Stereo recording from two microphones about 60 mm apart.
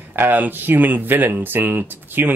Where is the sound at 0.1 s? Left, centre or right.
Right.